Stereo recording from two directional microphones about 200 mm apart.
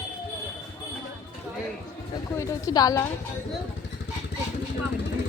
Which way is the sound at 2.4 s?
15° left (ahead or behind).